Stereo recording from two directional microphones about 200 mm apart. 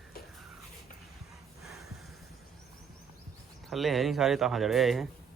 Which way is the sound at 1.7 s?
Centre (ahead or behind).